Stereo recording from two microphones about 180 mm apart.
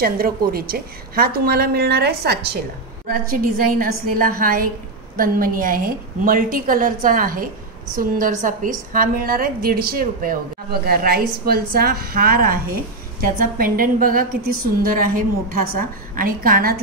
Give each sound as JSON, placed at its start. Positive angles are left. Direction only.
{"t": 0.0, "sound": "a woman's voice", "side_deg": -55}
{"t": 3.1, "sound": "a woman's voice", "side_deg": -50}